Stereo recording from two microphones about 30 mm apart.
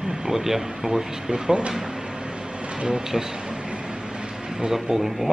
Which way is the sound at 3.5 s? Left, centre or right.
Right.